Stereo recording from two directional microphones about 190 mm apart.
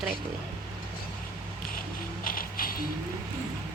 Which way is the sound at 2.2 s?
50° left (ahead or behind).